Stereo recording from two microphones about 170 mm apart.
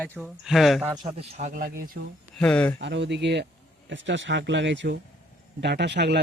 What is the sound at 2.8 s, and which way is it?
Speech, 90° right.